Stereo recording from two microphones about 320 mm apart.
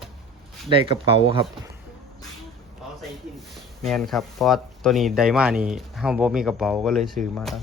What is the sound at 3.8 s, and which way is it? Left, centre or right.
Speech, centre.